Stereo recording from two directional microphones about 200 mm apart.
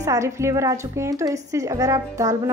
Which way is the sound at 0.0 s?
15° right (ahead or behind).